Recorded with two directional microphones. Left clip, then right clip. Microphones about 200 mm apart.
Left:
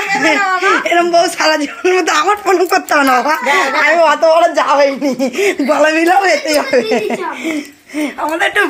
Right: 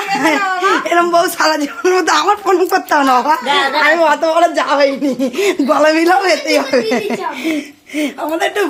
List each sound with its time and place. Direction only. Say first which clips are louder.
0.1 s speech: left 2 dB; centre (ahead or behind)